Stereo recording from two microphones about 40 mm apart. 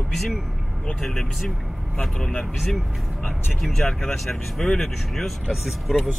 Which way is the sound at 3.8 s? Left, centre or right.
Centre.